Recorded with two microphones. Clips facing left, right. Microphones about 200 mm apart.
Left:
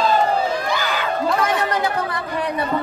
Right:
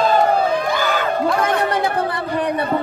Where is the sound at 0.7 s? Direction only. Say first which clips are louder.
Right 3 dB; 50° right (ahead or behind).